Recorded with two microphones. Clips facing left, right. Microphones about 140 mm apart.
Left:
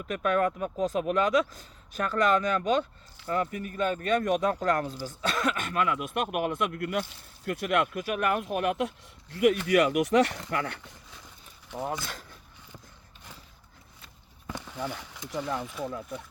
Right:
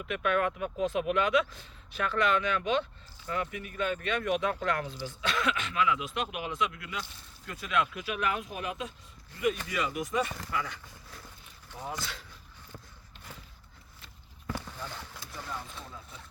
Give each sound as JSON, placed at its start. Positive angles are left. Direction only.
{"t": 0.1, "sound": "speech", "side_deg": 40}
{"t": 14.5, "sound": "a sound", "side_deg": 15}
{"t": 15.3, "sound": "speech", "side_deg": 90}